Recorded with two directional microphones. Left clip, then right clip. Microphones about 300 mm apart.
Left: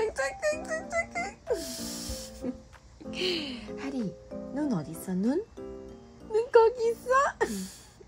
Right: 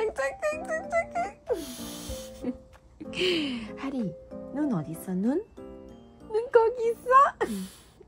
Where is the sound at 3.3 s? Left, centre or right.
Right.